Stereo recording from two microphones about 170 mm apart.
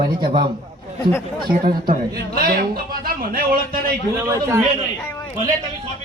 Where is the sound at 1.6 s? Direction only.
60° right (ahead or behind).